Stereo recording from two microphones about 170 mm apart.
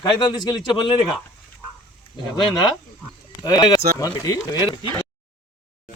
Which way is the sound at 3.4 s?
20° left (ahead or behind).